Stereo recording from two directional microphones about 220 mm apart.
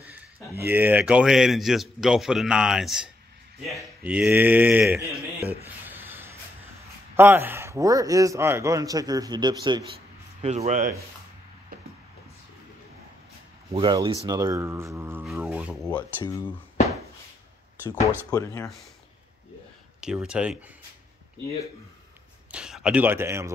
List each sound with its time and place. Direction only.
0.7 s a man's voice: 10° right (ahead or behind)
5.9 s a sound: 10° right (ahead or behind)
7.2 s a man's voice: 10° right (ahead or behind)
10.4 s speech: 30° right (ahead or behind)
13.7 s a man's voice: 25° right (ahead or behind); by 15.9 s 5° right (ahead or behind)
15.9 s speech: 15° left (ahead or behind)
18.3 s speech: 15° left (ahead or behind)
20.0 s a man's voice: 5° right (ahead or behind)
22.5 s speech: 5° right (ahead or behind)